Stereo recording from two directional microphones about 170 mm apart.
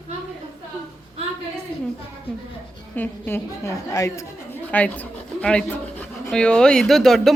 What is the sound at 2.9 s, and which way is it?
A woman's voice, 10° left (ahead or behind).